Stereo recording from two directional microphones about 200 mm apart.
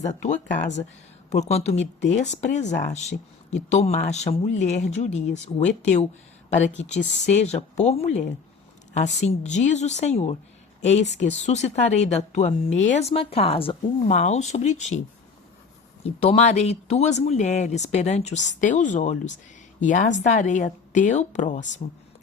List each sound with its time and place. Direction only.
0.0 s speech: 35° left (ahead or behind)
7.4 s speech: 35° left (ahead or behind)
16.0 s speech: 30° left (ahead or behind)